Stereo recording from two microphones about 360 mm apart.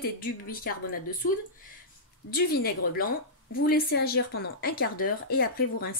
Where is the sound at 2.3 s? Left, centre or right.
Left.